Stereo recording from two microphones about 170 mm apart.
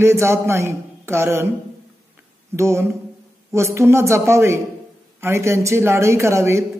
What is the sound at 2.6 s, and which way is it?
Speech, 15° right (ahead or behind).